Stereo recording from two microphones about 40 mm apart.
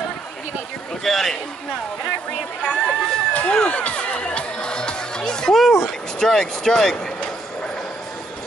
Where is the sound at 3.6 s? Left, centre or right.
Left.